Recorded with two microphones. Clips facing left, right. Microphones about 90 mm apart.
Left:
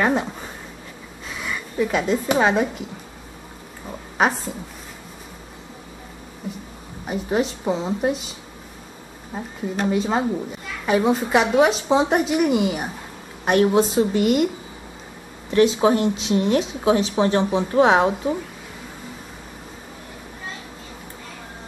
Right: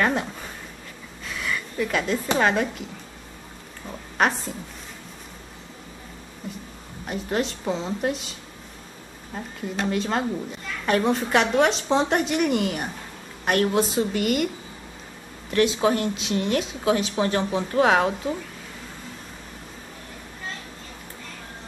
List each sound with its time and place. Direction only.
0.0 s a sound: 10° left (ahead or behind)
1.3 s speech: 10° left (ahead or behind)
3.8 s speech: 5° left (ahead or behind)
7.1 s a woman's voice: 5° left (ahead or behind)
15.8 s speech: 10° left (ahead or behind)